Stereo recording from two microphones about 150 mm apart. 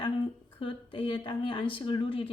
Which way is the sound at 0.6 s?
35° left (ahead or behind).